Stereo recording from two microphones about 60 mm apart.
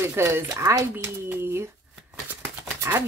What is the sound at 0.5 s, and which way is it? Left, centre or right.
Speech, right.